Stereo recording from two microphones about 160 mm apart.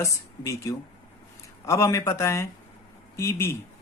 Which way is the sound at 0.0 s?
20° left (ahead or behind).